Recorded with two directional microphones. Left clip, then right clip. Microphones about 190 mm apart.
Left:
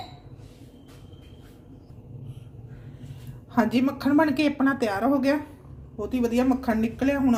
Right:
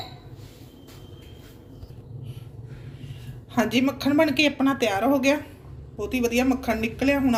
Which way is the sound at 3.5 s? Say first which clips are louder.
Right 1 dB; 45° left (ahead or behind).